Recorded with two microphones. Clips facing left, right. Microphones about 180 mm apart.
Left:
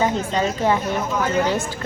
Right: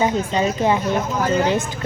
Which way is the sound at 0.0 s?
15° right (ahead or behind).